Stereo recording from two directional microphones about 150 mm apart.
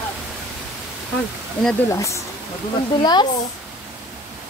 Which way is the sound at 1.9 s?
20° left (ahead or behind).